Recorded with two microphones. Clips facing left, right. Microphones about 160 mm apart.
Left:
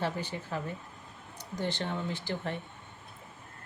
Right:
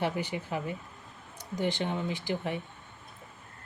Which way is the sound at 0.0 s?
10° right (ahead or behind).